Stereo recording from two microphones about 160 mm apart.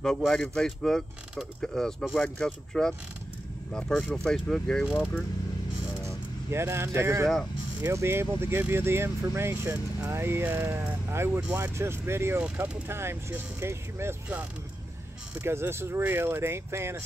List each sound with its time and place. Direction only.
0.0 s speech: 5° left (ahead or behind)
6.0 s speech: 15° right (ahead or behind)
15.4 s speech: 15° right (ahead or behind)